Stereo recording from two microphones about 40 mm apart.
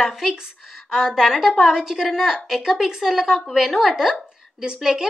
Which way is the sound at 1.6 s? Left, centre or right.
Centre.